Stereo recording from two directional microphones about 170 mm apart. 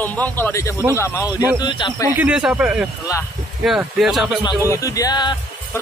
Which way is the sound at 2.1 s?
10° right (ahead or behind).